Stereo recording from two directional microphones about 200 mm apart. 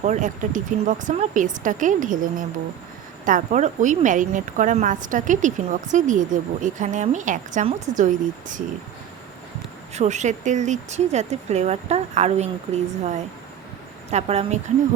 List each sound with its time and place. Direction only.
0.0 s a woman's voice: 35° right (ahead or behind)
9.9 s a woman's voice: 35° right (ahead or behind)